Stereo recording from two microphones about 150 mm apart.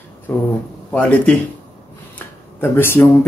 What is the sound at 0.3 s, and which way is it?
Speech, 10° left (ahead or behind).